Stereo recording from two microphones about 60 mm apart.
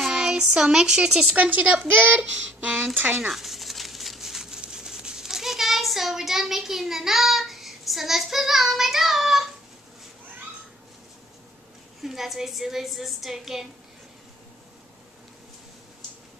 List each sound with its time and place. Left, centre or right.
0.0 s speech: centre
1.3 s speech: right
3.3 s crumpling: centre
12.0 s a woman's voice: centre